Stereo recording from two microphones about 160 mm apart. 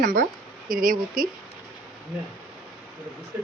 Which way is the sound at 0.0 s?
55° right (ahead or behind).